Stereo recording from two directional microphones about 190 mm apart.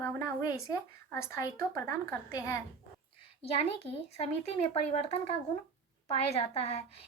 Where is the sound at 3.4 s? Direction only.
30° left (ahead or behind).